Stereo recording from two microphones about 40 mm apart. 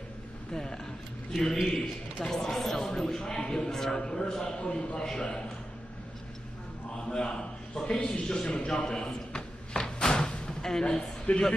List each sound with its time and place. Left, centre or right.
0.5 s a man's voice: centre
4.3 s speech: centre
7.1 s a man's voice: centre
8.5 s a sound: left
10.6 s speech: centre
10.9 s a man's voice: left